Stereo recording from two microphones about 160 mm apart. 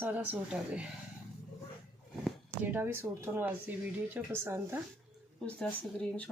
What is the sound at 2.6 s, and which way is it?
Speech, 10° right (ahead or behind).